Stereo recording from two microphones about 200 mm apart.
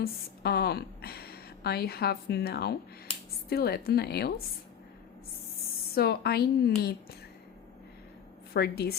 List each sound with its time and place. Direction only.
0.0 s a woman's voice: 55° left (ahead or behind)
5.9 s a woman's voice: 50° left (ahead or behind)
8.5 s a woman's voice: 50° left (ahead or behind)